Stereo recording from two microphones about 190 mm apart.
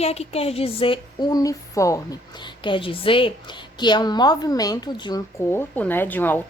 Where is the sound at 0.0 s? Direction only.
35° left (ahead or behind); by 2.0 s 15° left (ahead or behind).